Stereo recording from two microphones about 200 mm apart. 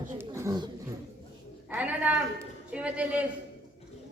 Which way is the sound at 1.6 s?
5° right (ahead or behind).